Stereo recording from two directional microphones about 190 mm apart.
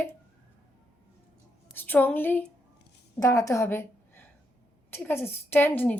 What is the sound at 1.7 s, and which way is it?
A woman's voice, 10° left (ahead or behind).